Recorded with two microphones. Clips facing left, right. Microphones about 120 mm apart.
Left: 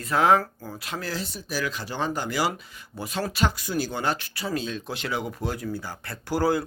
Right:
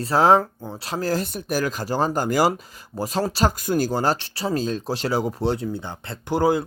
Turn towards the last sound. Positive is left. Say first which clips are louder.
# right 4 dB
turn(degrees=-20)  # may be behind; listen again after turning